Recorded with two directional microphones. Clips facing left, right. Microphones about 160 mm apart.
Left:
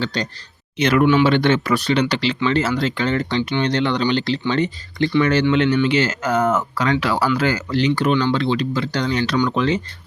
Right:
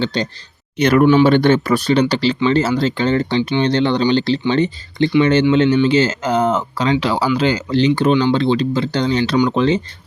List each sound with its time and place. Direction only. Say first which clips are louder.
0.0 s speech: right 4 dB; 25° right (ahead or behind)
0.8 s speech: right 4 dB; 40° right (ahead or behind)